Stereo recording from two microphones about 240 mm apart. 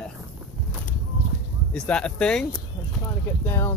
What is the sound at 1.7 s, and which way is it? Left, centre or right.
Speech, centre.